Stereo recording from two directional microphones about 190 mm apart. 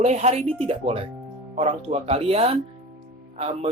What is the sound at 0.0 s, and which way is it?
Speech, 35° right (ahead or behind).